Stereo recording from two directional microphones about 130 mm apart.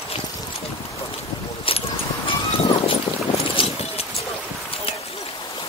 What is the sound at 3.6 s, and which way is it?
Vehicle, 45° left (ahead or behind).